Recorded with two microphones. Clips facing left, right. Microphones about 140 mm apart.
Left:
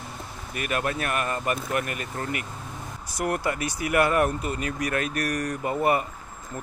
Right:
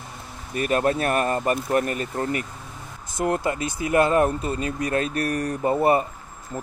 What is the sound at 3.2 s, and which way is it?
Speech, 20° right (ahead or behind).